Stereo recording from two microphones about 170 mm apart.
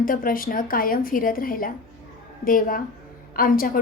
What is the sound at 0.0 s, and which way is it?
A woman's voice, 55° left (ahead or behind).